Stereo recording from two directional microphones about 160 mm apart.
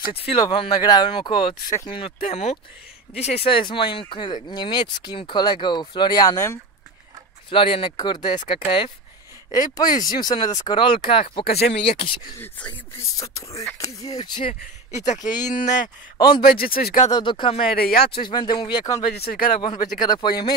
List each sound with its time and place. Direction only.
0.3 s speech: 30° left (ahead or behind)
7.5 s speech: 35° left (ahead or behind)
11.4 s speech: 70° left (ahead or behind)
11.7 s speech: 40° left (ahead or behind)
12.4 s speech: 10° left (ahead or behind)
13.2 s speech: 20° left (ahead or behind)
15.5 s speech: 55° left (ahead or behind)
16.2 s speech: 25° left (ahead or behind)
16.4 s speech: 65° left (ahead or behind)
17.1 s speech: 30° left (ahead or behind)
17.7 s speech: 75° left (ahead or behind)
18.0 s speech: 30° left (ahead or behind)
19.0 s speech: 70° left (ahead or behind)
20.0 s speech: 25° left (ahead or behind)